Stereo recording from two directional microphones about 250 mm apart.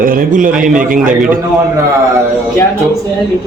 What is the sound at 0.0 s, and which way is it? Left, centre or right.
Speech, right.